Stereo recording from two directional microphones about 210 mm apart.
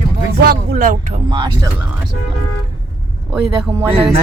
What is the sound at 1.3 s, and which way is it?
Speech, 20° right (ahead or behind).